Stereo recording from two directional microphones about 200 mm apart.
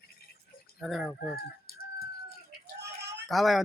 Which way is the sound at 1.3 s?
50° left (ahead or behind).